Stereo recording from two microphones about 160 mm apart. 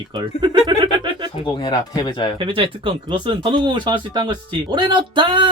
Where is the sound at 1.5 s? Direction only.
25° left (ahead or behind).